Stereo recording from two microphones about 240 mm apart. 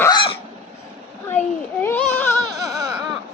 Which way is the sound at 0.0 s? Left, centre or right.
Centre.